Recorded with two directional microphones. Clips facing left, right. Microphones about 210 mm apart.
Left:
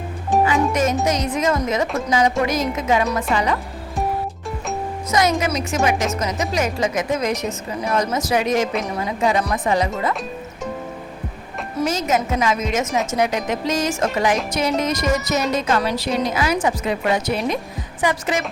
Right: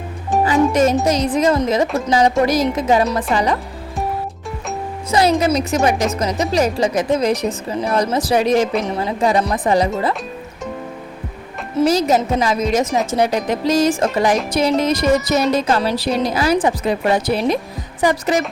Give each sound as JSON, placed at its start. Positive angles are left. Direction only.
{"t": 0.3, "sound": "music", "side_deg": 0}
{"t": 0.7, "sound": "music", "side_deg": -30}
{"t": 1.0, "sound": "a woman's voice", "side_deg": -30}
{"t": 5.1, "sound": "a woman's voice", "side_deg": -30}
{"t": 11.9, "sound": "a woman's voice", "side_deg": -35}